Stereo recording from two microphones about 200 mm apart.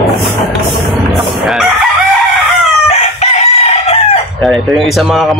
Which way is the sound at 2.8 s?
30° left (ahead or behind).